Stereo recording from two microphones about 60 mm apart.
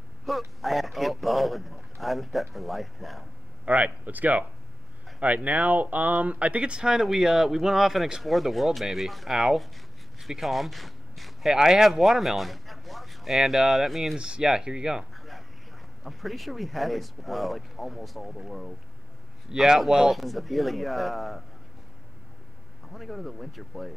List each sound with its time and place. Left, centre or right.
0.3 s speech: centre
3.6 s speech: right; by 14.1 s centre
14.1 s speech: centre
15.1 s a sound: centre
16.0 s speech: centre
19.5 s speech: centre
22.9 s speech: centre